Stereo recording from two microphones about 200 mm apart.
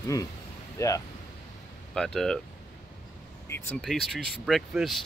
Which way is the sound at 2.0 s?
5° left (ahead or behind).